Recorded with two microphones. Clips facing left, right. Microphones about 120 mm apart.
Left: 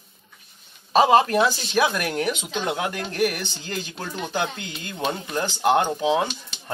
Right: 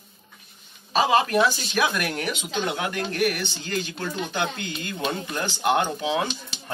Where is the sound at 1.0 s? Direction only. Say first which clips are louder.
Left 4 dB; 40° left (ahead or behind).